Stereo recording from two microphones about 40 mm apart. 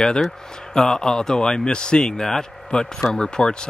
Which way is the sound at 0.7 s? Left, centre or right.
Centre.